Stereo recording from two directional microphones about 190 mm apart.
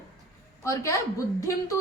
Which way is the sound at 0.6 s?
15° left (ahead or behind).